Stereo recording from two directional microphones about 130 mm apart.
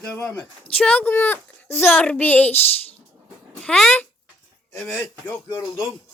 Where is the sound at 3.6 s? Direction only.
5° left (ahead or behind).